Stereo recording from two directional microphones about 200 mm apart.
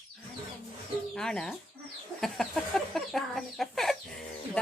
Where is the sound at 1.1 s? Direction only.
5° left (ahead or behind).